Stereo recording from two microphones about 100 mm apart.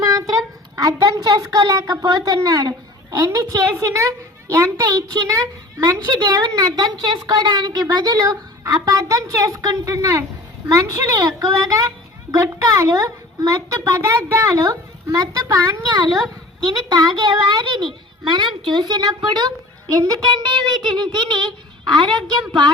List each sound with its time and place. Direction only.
0.0 s a sound: 35° right (ahead or behind)
0.8 s a woman's voice: 35° right (ahead or behind)
16.6 s a woman's voice: 40° right (ahead or behind)